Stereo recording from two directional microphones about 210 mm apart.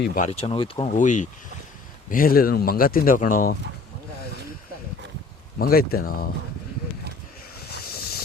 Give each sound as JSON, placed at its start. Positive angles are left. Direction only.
{"t": 0.0, "sound": "speech", "side_deg": 45}
{"t": 0.3, "sound": "speech", "side_deg": 30}
{"t": 0.9, "sound": "speech", "side_deg": 35}
{"t": 5.5, "sound": "speech", "side_deg": 45}
{"t": 7.7, "sound": "vehicle", "side_deg": 45}